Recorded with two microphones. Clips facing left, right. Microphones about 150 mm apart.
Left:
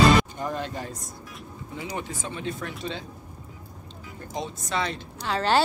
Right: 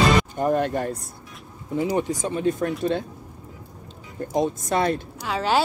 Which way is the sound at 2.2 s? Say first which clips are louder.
Right 9 dB; 45° right (ahead or behind).